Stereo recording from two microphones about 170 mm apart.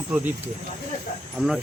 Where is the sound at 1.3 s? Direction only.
Centre (ahead or behind).